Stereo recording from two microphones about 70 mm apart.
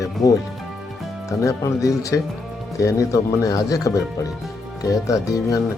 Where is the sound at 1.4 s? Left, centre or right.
Left.